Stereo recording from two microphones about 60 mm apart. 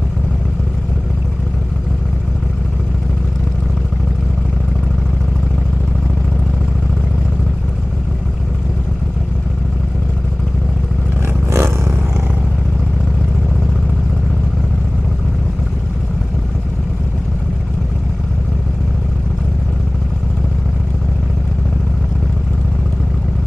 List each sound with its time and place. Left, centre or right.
11.2 s roar: right